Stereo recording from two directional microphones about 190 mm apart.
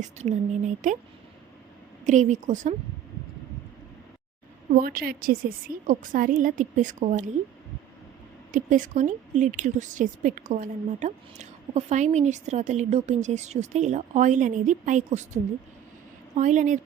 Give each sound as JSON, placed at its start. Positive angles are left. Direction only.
{"t": 0.0, "sound": "a woman's voice", "side_deg": -40}
{"t": 2.0, "sound": "a woman's voice", "side_deg": -40}
{"t": 4.7, "sound": "a woman's voice", "side_deg": -50}
{"t": 8.5, "sound": "a woman's voice", "side_deg": -45}